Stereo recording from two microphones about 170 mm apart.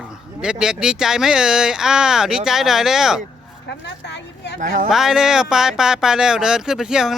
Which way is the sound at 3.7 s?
90° left.